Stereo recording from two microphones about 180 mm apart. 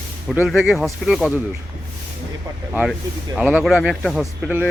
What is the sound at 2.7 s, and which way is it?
Speech, 5° right (ahead or behind).